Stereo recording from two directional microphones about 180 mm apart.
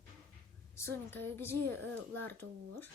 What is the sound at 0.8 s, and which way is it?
Speech, 15° left (ahead or behind).